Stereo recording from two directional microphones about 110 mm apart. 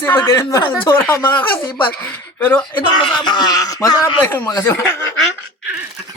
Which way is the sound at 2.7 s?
40° left (ahead or behind).